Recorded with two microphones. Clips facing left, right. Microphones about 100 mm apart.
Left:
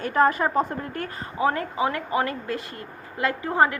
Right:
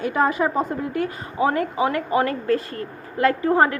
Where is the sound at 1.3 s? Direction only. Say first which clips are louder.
Right 3 dB; 25° right (ahead or behind).